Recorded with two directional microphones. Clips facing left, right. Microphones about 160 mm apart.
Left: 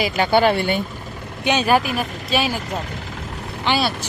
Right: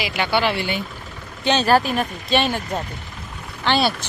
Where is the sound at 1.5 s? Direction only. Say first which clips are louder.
Right 1 dB; 10° left (ahead or behind).